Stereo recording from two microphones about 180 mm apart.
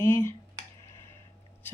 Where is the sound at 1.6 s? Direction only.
10° left (ahead or behind).